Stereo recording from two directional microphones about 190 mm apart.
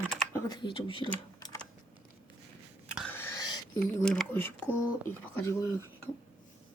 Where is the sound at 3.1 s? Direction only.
10° left (ahead or behind).